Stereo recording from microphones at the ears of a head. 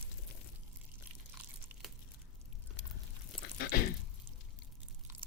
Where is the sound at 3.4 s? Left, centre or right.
Left.